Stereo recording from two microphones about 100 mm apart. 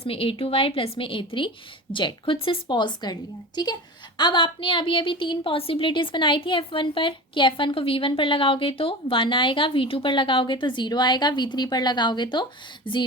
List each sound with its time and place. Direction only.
0.0 s a woman's voice: 65° left (ahead or behind); by 13.0 s 50° left (ahead or behind)